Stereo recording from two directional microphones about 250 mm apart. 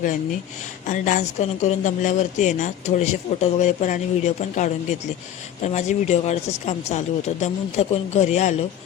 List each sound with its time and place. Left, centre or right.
0.9 s a woman's voice: left